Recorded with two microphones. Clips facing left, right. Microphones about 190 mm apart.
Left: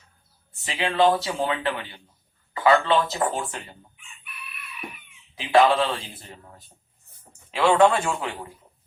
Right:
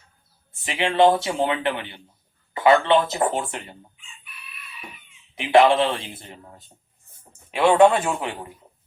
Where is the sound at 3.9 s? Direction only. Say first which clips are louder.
Left 4 dB; 60° left (ahead or behind).